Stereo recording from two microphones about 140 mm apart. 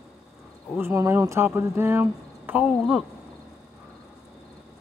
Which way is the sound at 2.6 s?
Centre (ahead or behind).